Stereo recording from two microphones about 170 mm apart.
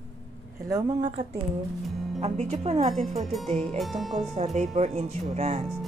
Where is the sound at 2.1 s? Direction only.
40° right (ahead or behind).